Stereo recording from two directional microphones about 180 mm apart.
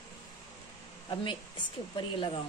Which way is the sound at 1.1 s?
25° left (ahead or behind).